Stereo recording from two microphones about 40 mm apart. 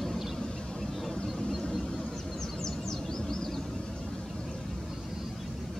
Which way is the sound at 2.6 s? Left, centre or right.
Centre.